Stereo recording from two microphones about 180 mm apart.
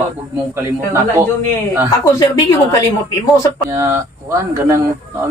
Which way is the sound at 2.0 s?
20° left (ahead or behind).